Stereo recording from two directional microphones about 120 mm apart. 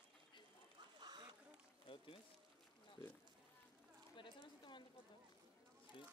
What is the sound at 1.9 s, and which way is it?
Pour, 50° left (ahead or behind).